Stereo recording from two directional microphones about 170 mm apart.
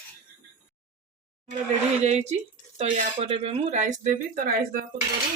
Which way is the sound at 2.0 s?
40° right (ahead or behind).